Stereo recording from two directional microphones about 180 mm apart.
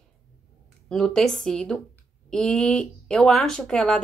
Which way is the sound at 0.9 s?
Centre (ahead or behind).